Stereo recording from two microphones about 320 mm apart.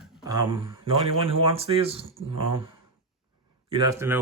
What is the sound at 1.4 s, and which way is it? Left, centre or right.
Speech, centre.